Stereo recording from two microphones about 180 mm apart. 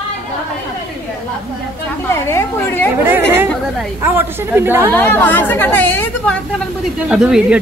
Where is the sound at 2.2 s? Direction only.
15° left (ahead or behind).